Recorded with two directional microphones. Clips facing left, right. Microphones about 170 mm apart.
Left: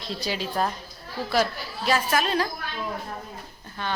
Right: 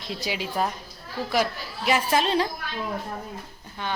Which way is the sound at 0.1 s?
10° right (ahead or behind).